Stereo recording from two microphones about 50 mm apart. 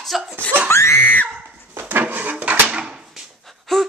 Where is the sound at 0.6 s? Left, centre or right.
Left.